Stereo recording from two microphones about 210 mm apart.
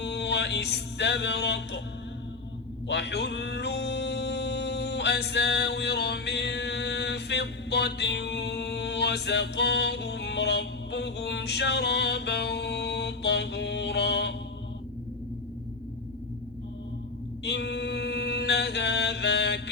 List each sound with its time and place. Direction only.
0.0 s music: 55° left (ahead or behind)
2.8 s music: 55° left (ahead or behind)
17.4 s a capella: 55° left (ahead or behind)